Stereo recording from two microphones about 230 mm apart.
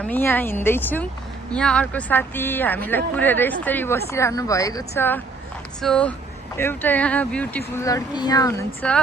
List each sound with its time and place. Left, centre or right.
0.0 s speech: centre